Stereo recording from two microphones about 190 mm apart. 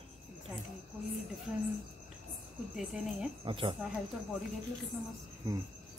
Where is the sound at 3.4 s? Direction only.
25° right (ahead or behind).